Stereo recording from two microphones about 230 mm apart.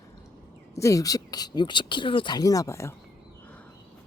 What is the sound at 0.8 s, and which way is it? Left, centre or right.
Speech, centre.